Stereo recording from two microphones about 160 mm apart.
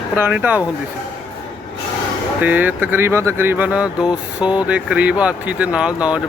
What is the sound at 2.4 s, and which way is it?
Speech, 10° right (ahead or behind).